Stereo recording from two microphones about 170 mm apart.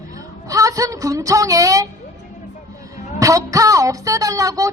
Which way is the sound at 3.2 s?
20° right (ahead or behind).